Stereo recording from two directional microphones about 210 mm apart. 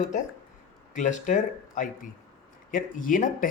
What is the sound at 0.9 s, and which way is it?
Speech, 35° left (ahead or behind).